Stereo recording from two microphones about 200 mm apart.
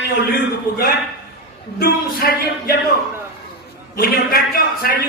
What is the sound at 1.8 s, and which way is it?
Speech, 50° left (ahead or behind).